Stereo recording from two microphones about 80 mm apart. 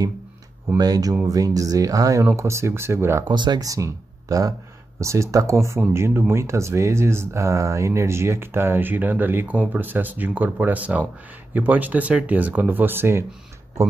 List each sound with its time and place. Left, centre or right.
0.7 s speech: right
2.2 s speech: right
3.3 s speech: right
3.6 s speech: right